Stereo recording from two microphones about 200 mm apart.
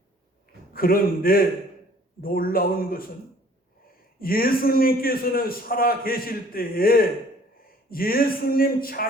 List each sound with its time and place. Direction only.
0.7 s a man's voice: 45° left (ahead or behind)
4.2 s a man's voice: 45° left (ahead or behind)